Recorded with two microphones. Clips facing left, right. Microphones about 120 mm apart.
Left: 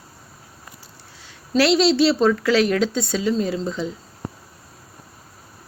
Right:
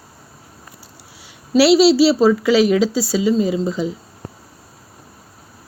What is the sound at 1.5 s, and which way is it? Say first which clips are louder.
A woman's voice: right 5 dB; 5° right (ahead or behind).